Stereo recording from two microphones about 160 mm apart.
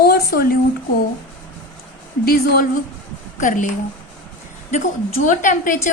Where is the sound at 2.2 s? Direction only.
70° left (ahead or behind).